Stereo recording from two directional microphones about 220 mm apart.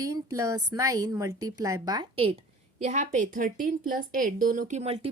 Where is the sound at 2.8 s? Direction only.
35° right (ahead or behind).